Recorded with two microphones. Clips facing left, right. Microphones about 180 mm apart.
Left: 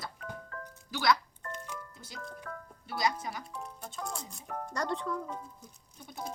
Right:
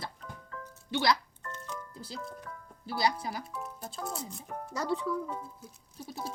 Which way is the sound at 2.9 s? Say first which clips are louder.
Right 2 dB; 30° right (ahead or behind).